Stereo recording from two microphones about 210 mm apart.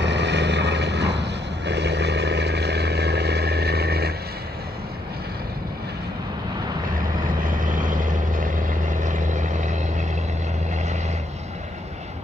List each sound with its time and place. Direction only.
0.0 s vehicle: 55° right (ahead or behind)
7.2 s vehicle: 40° right (ahead or behind)